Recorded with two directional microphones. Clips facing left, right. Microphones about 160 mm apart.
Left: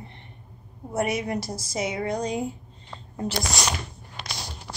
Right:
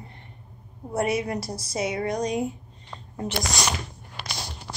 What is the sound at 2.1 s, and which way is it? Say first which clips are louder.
Speech: right 1 dB; 30° left (ahead or behind).